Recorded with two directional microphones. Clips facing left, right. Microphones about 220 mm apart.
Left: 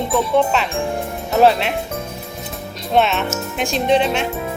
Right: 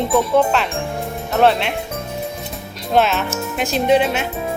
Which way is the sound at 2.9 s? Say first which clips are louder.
Even; centre (ahead or behind).